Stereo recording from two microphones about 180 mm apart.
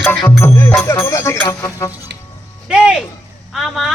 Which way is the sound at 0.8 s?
15° left (ahead or behind).